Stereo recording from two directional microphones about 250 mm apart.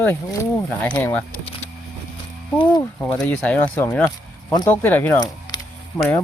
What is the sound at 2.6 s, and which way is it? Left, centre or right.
Speech, centre.